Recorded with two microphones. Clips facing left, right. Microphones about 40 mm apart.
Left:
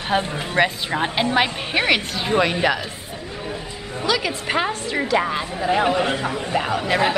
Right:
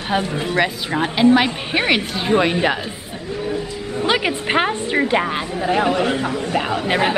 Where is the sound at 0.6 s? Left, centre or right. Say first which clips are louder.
Left 1 dB; centre.